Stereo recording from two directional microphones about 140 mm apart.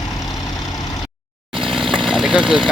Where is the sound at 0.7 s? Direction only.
30° left (ahead or behind).